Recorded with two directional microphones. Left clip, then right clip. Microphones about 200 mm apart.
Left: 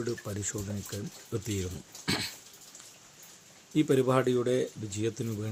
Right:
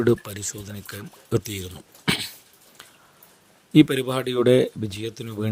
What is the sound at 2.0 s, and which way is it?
Dog, 40° right (ahead or behind).